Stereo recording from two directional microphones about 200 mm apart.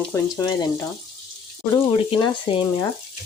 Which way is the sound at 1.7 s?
15° left (ahead or behind).